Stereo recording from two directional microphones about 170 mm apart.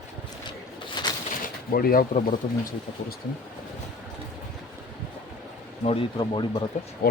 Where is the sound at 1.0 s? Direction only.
25° left (ahead or behind).